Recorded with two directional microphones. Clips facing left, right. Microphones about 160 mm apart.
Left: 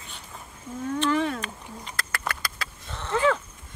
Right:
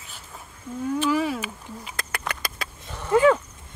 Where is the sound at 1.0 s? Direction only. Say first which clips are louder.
Even; 5° right (ahead or behind).